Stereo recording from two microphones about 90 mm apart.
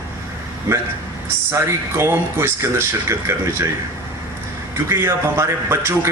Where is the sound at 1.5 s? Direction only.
30° right (ahead or behind).